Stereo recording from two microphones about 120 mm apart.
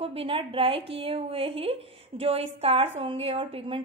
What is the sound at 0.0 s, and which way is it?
A woman's voice, 50° right (ahead or behind).